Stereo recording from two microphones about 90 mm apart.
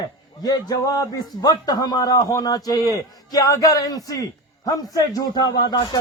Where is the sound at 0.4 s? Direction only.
45° left (ahead or behind).